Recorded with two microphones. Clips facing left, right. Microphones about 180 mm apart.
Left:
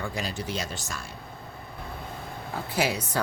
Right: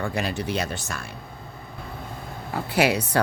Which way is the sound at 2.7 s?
70° right (ahead or behind).